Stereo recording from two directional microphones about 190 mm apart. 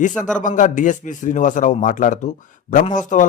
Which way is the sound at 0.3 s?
40° left (ahead or behind).